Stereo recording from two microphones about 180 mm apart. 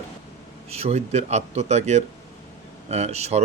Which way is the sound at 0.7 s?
35° right (ahead or behind).